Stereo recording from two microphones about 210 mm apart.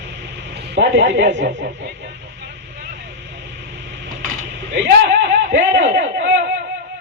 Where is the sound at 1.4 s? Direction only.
55° right (ahead or behind).